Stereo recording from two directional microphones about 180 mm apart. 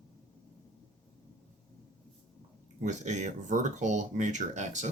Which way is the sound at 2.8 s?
40° right (ahead or behind).